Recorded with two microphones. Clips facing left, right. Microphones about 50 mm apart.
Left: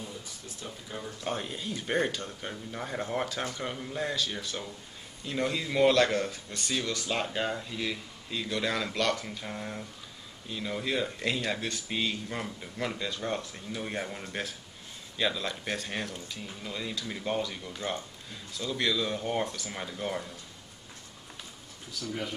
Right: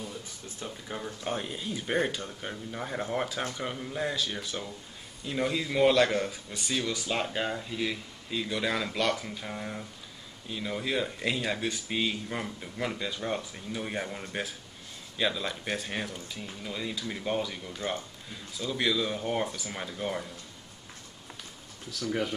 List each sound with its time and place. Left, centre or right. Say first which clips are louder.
1.2 s speech: left 1 dB; centre
22.0 s speech: right 5 dB; right